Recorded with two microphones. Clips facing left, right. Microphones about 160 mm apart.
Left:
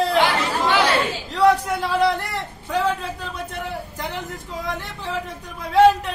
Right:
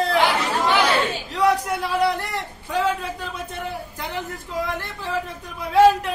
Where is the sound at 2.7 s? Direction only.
Centre (ahead or behind).